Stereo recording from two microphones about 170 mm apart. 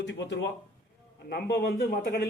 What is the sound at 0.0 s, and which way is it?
Speech, 90° left.